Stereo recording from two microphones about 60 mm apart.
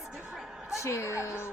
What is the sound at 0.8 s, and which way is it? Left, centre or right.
Speech, left.